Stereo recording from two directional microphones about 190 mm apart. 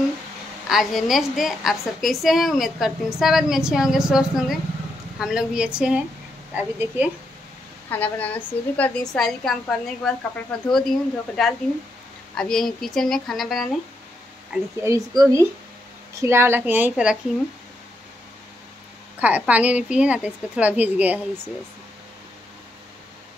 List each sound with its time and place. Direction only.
0.7 s a woman's voice: centre (ahead or behind)
7.9 s a woman's voice: 10° left (ahead or behind)
14.5 s speech: 15° right (ahead or behind)
19.1 s speech: 10° right (ahead or behind)